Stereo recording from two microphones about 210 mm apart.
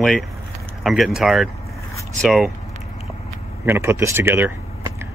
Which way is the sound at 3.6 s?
10° right (ahead or behind).